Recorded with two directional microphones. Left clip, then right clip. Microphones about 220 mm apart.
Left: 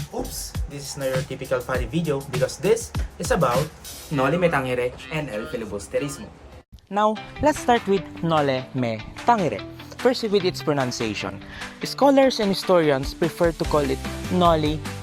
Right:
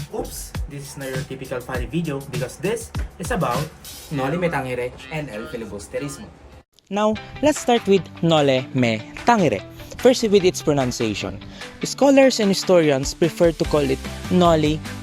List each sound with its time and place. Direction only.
0.2 s speech: centre (ahead or behind)
1.4 s speech: 15° left (ahead or behind)
2.0 s speech: centre (ahead or behind)
6.9 s speech: 40° right (ahead or behind)